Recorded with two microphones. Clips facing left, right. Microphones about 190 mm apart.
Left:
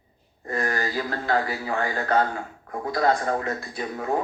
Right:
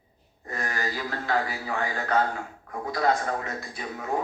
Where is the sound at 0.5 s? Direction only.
40° left (ahead or behind).